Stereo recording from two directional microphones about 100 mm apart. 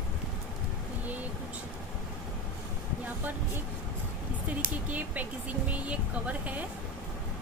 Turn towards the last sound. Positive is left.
turn(degrees=-15)  # may be behind; listen again after turning